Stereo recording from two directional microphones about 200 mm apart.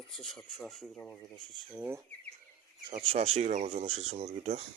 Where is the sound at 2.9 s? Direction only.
30° right (ahead or behind).